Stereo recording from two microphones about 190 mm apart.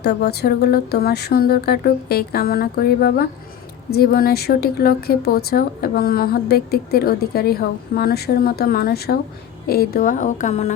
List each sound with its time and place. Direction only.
0.0 s a woman's voice: 60° left (ahead or behind); by 10.8 s 35° left (ahead or behind)